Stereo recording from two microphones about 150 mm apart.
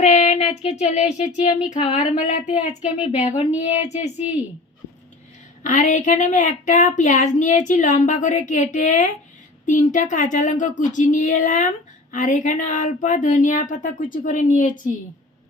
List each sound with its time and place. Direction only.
0.0 s child singing: 50° left (ahead or behind)
1.7 s speech: 55° left (ahead or behind)
5.6 s a woman's voice: 55° left (ahead or behind)